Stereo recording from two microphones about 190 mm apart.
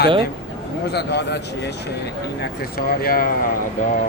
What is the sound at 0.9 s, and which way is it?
A man's voice, 60° left (ahead or behind).